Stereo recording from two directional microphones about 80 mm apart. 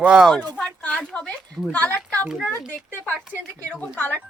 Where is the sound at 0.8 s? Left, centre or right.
Centre.